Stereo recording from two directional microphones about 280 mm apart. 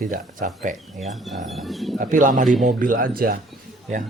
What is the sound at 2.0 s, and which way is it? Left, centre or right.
Speech, right.